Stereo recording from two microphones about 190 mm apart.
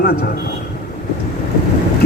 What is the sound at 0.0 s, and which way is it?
Speech, 55° left (ahead or behind).